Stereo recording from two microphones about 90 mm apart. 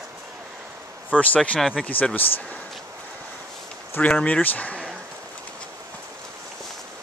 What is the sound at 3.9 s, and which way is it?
Speech, 15° left (ahead or behind).